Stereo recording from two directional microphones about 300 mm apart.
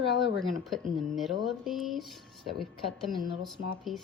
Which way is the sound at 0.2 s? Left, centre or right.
Centre.